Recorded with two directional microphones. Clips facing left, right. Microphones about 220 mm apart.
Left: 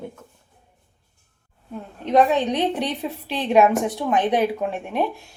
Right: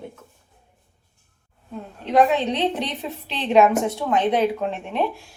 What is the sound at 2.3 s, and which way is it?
A woman's voice, 15° left (ahead or behind).